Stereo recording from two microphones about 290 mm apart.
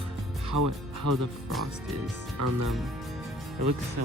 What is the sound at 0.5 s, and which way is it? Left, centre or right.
Speech, right.